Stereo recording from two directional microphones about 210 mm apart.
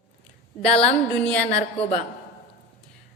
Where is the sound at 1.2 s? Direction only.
5° left (ahead or behind).